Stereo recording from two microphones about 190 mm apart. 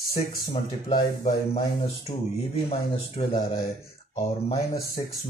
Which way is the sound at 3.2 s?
30° left (ahead or behind).